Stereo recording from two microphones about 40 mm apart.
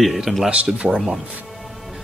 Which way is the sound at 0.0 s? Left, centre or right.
Centre.